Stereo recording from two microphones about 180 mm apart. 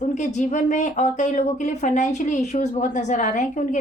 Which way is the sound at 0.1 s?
40° left (ahead or behind).